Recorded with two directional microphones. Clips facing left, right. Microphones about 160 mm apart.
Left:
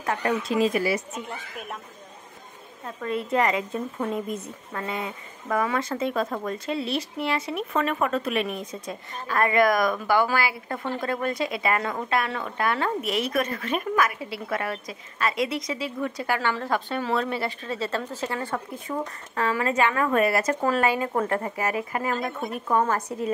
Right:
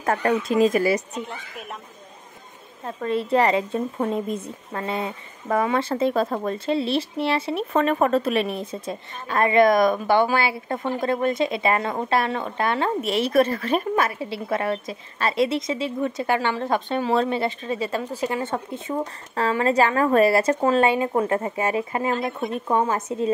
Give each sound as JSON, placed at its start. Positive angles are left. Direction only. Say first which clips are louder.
{"t": 0.0, "sound": "speech", "louder": "right 4 dB", "side_deg": -50}
{"t": 3.0, "sound": "a woman's voice", "louder": "right 4 dB", "side_deg": -30}